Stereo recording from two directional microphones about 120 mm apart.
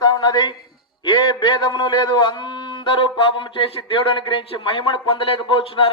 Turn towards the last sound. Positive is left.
turn(degrees=50)  # may be behind; listen again after turning